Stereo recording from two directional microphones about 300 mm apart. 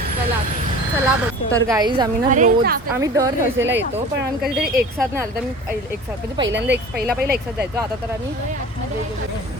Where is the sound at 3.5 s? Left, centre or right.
Right.